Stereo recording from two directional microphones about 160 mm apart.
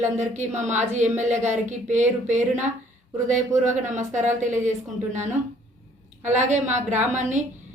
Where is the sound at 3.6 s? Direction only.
50° right (ahead or behind).